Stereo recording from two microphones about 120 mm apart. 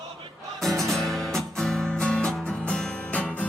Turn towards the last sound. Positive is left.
turn(degrees=10)  # may be behind; listen again after turning